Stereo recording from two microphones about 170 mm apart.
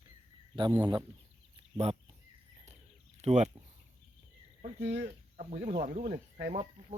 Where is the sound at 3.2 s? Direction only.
40° right (ahead or behind).